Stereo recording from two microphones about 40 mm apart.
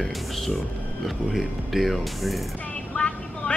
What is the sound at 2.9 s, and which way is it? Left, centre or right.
Vehicle, left.